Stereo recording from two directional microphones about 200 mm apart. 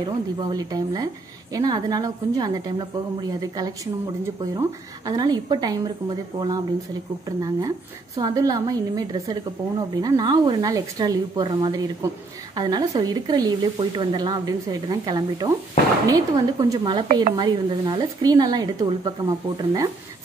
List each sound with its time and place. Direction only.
0.0 s a woman's voice: 20° right (ahead or behind)